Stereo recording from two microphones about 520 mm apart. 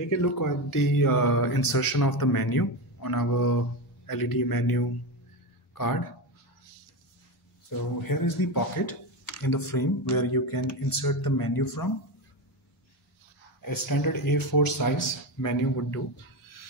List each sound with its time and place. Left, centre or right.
0.2 s speech: left
8.1 s speech: left
13.7 s speech: left